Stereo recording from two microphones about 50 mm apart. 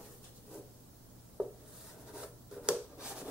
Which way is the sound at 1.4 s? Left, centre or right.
Centre.